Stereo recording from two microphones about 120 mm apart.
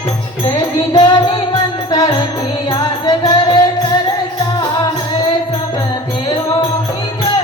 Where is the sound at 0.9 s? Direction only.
40° left (ahead or behind).